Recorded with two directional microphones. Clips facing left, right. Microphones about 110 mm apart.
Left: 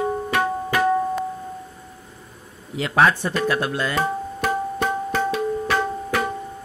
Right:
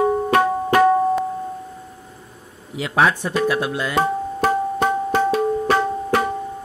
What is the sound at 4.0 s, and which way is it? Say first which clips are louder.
Music: right 4 dB; 35° right (ahead or behind).